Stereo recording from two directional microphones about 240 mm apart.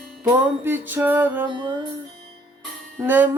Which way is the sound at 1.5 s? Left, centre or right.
Centre.